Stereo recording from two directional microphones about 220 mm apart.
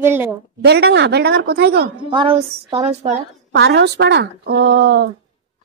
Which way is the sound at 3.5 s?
50° right (ahead or behind).